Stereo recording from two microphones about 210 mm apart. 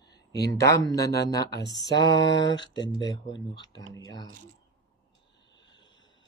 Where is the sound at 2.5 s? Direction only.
20° left (ahead or behind).